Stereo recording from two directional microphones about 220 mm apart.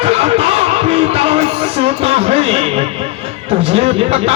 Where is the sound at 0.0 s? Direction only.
25° right (ahead or behind).